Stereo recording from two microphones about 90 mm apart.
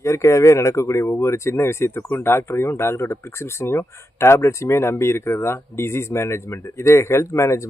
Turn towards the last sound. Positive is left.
turn(degrees=35)  # may be behind; listen again after turning